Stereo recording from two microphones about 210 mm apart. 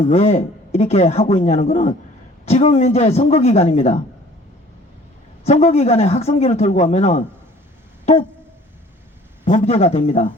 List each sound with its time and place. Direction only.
0.0 s a man's voice: 35° left (ahead or behind)
5.5 s a man's voice: 30° left (ahead or behind)
9.4 s a man's voice: 35° left (ahead or behind)